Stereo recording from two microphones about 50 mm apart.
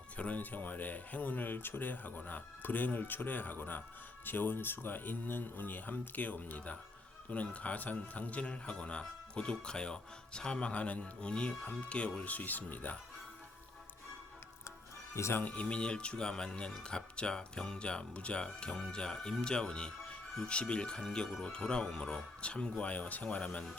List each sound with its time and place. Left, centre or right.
0.2 s speech: left
15.3 s speech: left
15.5 s speech: left
22.4 s speech: left